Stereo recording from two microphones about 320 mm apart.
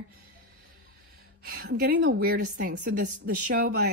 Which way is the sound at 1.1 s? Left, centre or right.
Right.